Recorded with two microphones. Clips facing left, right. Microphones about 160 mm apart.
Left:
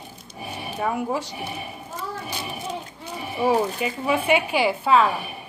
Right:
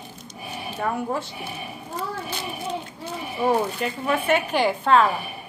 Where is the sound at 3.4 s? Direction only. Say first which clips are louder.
Left 1 dB; 5° left (ahead or behind).